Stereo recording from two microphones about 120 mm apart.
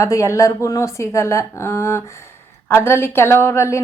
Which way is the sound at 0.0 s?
25° left (ahead or behind).